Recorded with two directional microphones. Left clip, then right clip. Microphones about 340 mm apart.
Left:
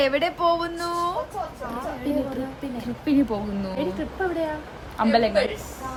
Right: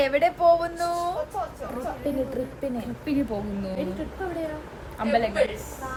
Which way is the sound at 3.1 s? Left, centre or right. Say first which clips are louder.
Left 5 dB; centre.